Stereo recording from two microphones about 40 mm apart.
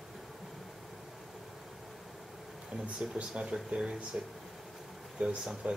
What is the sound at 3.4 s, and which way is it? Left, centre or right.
Speech, right.